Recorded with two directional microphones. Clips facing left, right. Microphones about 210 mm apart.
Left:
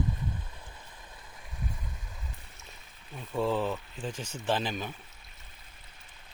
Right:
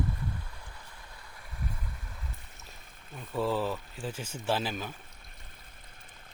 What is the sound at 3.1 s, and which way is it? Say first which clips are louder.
Speech: left 1 dB; centre (ahead or behind).